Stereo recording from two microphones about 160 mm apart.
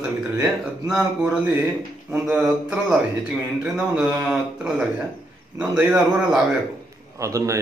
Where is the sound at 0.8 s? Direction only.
5° right (ahead or behind).